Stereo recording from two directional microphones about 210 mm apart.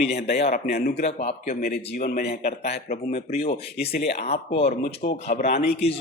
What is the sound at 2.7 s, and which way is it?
Speech, 35° left (ahead or behind).